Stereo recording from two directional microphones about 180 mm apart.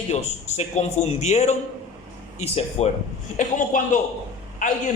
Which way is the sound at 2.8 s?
35° left (ahead or behind).